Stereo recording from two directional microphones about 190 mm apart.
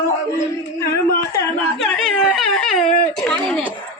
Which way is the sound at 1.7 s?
Centre (ahead or behind).